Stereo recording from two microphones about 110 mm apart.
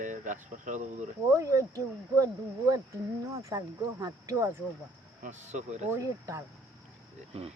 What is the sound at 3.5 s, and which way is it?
Speech, 30° right (ahead or behind).